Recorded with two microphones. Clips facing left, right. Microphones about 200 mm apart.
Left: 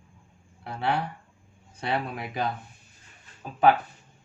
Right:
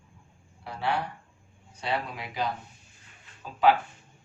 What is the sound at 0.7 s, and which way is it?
A man's voice, 55° left (ahead or behind).